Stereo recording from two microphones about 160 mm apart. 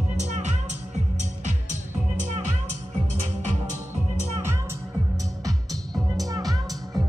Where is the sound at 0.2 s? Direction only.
45° right (ahead or behind).